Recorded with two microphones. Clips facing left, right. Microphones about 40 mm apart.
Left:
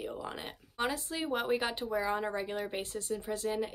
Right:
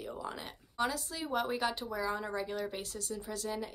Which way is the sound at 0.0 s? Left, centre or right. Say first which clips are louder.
Left 2 dB; left.